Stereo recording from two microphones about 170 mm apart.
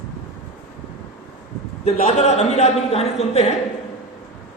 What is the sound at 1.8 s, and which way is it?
A man's voice, 40° left (ahead or behind).